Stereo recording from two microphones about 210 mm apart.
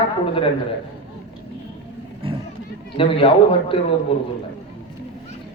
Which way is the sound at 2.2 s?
25° right (ahead or behind).